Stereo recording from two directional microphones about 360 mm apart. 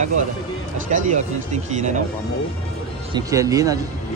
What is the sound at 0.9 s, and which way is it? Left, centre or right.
Speech, centre.